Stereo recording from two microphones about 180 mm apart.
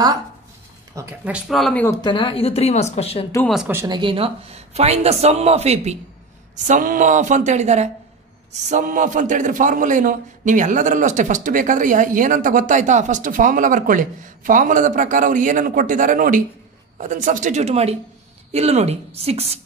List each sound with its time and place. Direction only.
0.9 s speech: 5° right (ahead or behind)
1.9 s speech: 25° left (ahead or behind)
3.4 s speech: 5° right (ahead or behind)
3.7 s speech: 20° right (ahead or behind)
6.7 s a man's voice: 45° right (ahead or behind)